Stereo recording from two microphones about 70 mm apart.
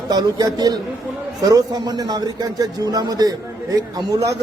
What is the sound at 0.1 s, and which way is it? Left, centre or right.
Speech, right.